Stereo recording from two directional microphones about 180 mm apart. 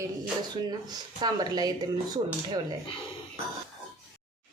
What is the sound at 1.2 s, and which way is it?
Speech, 20° right (ahead or behind).